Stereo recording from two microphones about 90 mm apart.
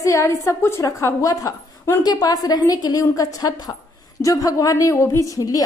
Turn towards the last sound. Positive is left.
turn(degrees=40)  # may be behind; listen again after turning